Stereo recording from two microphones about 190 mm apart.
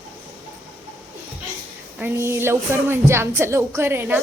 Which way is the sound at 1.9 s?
10° right (ahead or behind).